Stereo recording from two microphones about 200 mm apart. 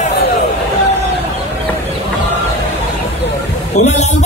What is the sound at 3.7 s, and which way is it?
Speech, 35° left (ahead or behind).